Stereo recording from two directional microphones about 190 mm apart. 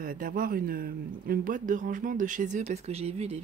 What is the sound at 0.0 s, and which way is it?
Speech, 45° right (ahead or behind).